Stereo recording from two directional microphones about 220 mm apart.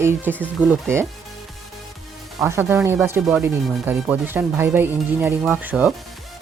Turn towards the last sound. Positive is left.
turn(degrees=-5)  # may be behind; listen again after turning